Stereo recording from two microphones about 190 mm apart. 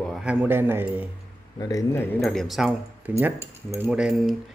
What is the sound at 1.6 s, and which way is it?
Speech, 20° left (ahead or behind).